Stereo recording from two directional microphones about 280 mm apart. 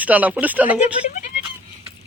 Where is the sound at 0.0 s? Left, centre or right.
Centre.